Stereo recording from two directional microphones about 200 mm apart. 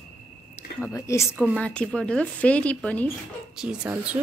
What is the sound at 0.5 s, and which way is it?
Speech, 15° left (ahead or behind).